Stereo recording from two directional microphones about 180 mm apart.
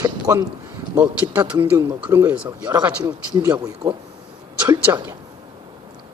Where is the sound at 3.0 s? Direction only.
25° right (ahead or behind).